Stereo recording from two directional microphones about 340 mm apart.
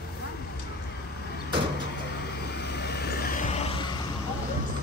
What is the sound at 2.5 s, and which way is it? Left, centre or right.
Vehicle, left.